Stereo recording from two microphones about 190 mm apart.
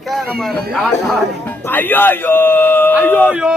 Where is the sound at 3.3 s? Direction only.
5° right (ahead or behind).